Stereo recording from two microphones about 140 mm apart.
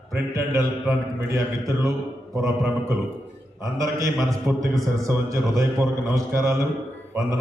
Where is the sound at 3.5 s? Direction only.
20° right (ahead or behind).